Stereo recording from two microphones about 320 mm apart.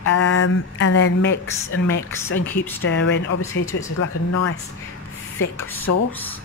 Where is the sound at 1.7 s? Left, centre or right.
Left.